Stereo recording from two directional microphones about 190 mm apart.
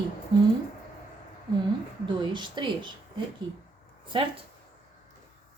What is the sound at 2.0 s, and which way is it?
Speech, 25° right (ahead or behind).